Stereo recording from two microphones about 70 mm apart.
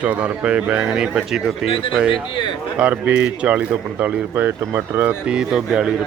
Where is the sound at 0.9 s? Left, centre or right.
Centre.